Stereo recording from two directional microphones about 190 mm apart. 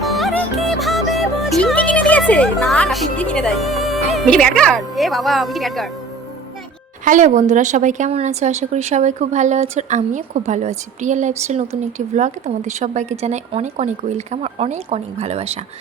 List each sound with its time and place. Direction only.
0.0 s music: centre (ahead or behind)
7.0 s a woman's voice: 40° right (ahead or behind)